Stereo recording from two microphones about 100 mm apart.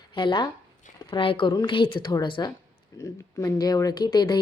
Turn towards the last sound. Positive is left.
turn(degrees=45)  # may be behind; listen again after turning